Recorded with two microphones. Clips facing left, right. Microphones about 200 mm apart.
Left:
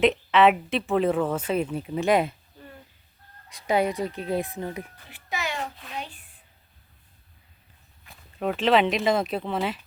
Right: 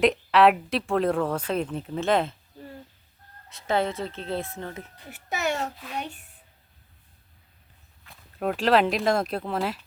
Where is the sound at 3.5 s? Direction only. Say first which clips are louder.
Left 2 dB; 15° left (ahead or behind).